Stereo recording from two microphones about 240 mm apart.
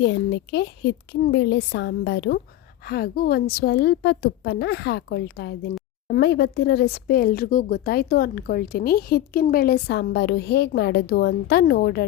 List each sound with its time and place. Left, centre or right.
0.0 s a woman's voice: left